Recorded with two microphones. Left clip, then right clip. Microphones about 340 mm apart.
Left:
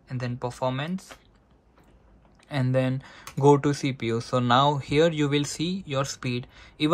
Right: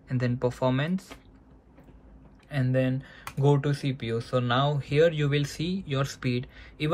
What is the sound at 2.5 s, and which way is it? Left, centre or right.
Speech, centre.